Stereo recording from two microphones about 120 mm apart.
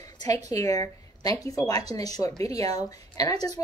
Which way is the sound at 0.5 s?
30° left (ahead or behind).